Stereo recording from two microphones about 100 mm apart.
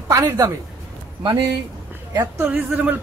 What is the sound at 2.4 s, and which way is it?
Speech, 15° right (ahead or behind).